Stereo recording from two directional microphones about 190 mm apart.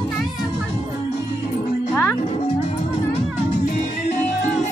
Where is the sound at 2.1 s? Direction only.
30° left (ahead or behind).